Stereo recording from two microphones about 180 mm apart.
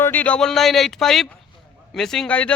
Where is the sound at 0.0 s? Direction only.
10° left (ahead or behind).